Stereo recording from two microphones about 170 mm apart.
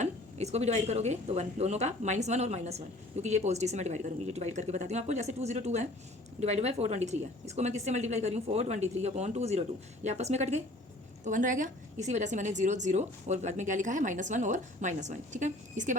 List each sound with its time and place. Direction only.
0.0 s a woman's voice: 40° right (ahead or behind)